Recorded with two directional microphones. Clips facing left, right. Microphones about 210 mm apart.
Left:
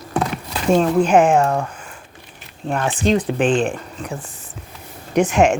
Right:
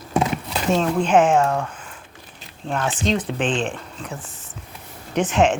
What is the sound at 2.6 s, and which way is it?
Speech, 10° left (ahead or behind).